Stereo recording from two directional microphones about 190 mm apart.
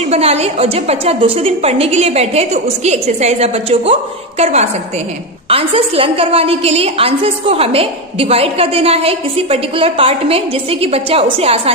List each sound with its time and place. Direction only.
0.1 s a woman's voice: 35° right (ahead or behind)